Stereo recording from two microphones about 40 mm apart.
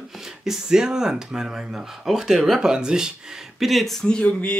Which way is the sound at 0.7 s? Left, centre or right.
Centre.